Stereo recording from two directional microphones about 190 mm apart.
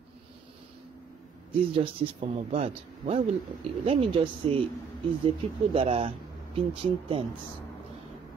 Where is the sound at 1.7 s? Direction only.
35° right (ahead or behind).